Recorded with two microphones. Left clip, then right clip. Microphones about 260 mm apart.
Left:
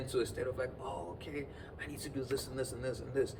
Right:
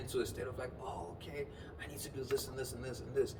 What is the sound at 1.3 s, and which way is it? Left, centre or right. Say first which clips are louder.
Speech: left 1 dB; centre.